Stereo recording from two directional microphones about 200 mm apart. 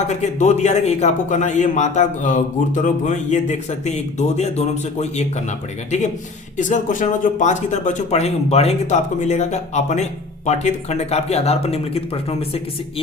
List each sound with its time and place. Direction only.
0.1 s speech: 35° left (ahead or behind)